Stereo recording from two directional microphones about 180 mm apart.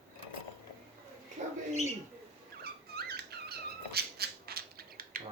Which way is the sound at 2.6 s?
60° right (ahead or behind).